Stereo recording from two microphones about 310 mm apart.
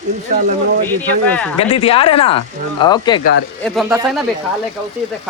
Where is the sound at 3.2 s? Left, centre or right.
Left.